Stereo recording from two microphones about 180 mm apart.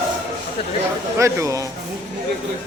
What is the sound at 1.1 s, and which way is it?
Speech, 15° right (ahead or behind).